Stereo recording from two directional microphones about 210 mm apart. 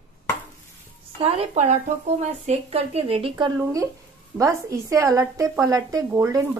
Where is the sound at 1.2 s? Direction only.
30° right (ahead or behind).